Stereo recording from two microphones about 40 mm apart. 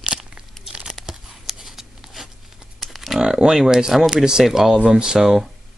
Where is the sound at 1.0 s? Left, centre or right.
Centre.